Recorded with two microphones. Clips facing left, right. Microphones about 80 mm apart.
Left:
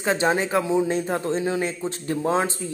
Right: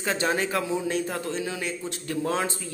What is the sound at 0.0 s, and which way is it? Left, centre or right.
A man's voice, left.